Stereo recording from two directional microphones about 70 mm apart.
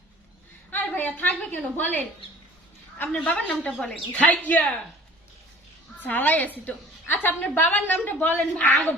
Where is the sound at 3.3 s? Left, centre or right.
Left.